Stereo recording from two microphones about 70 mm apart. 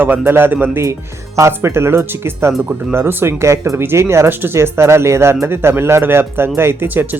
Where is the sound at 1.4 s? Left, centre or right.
Right.